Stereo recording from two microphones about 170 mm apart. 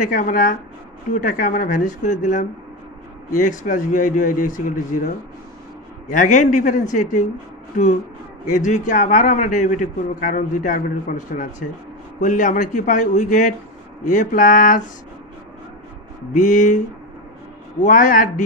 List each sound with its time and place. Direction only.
0.0 s a man's voice: 50° left (ahead or behind)
6.1 s a man's voice: 50° left (ahead or behind)
8.5 s a man's voice: 45° left (ahead or behind)
16.3 s a man's voice: 50° left (ahead or behind)
17.8 s a man's voice: 50° left (ahead or behind)